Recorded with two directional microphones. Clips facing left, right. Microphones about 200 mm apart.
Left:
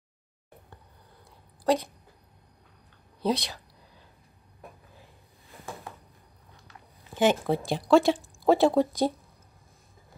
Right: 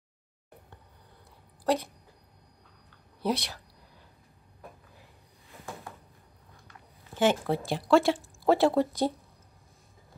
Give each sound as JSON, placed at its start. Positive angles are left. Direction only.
{"t": 1.6, "sound": "speech", "side_deg": 15}
{"t": 3.2, "sound": "speech", "side_deg": 20}
{"t": 7.2, "sound": "speech", "side_deg": 15}